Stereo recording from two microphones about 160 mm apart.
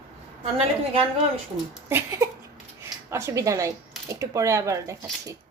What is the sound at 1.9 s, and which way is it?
A woman's voice, 15° right (ahead or behind).